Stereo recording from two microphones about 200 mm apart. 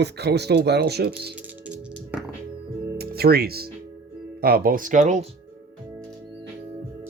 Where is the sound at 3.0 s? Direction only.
50° right (ahead or behind).